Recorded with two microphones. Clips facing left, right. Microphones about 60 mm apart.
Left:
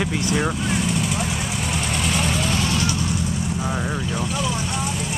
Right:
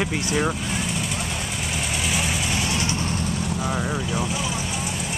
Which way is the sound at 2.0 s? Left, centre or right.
Centre.